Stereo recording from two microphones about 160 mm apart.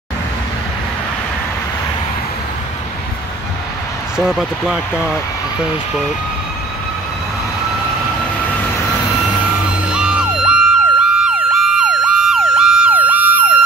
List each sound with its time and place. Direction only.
4.2 s speech: centre (ahead or behind)
8.5 s vehicle: 15° left (ahead or behind)
9.8 s emergency vehicle: 5° right (ahead or behind)